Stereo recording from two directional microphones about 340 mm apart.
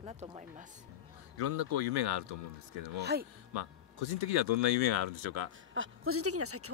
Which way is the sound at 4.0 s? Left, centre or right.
Left.